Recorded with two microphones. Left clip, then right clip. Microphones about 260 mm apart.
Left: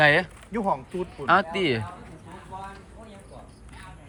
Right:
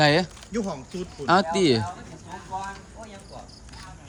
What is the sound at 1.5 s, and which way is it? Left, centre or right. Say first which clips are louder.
Speech: right 4 dB; centre.